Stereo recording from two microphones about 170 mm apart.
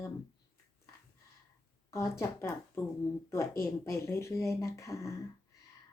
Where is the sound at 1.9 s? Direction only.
20° left (ahead or behind).